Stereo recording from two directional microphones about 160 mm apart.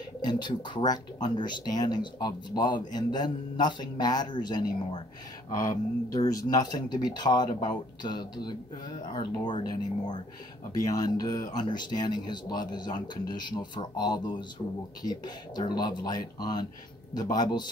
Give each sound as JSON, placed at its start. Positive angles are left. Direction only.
{"t": 0.2, "sound": "speech", "side_deg": 30}